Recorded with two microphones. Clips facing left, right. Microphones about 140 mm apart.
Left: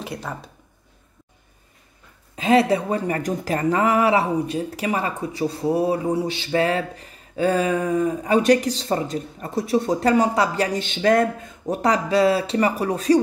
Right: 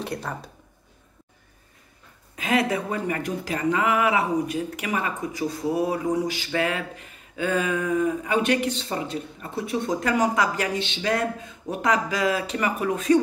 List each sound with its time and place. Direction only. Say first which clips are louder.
0.0 s speech: even; centre (ahead or behind)
2.3 s speech: left 6 dB; 30° left (ahead or behind)
10.8 s speech: left 7 dB; 50° left (ahead or behind)